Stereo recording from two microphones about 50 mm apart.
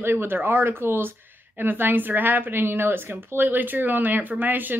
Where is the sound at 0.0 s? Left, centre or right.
Right.